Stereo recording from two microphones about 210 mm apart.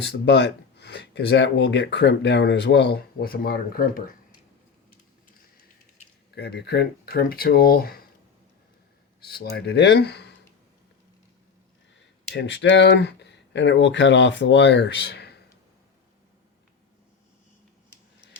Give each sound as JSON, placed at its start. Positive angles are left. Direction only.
{"t": 0.0, "sound": "speech", "side_deg": 55}
{"t": 6.3, "sound": "speech", "side_deg": 50}
{"t": 9.2, "sound": "speech", "side_deg": 50}
{"t": 11.9, "sound": "speech", "side_deg": 55}